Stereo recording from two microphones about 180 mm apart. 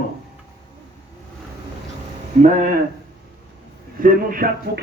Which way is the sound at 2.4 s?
45° right (ahead or behind).